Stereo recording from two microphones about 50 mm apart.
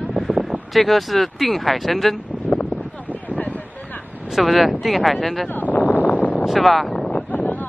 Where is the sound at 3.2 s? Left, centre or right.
Left.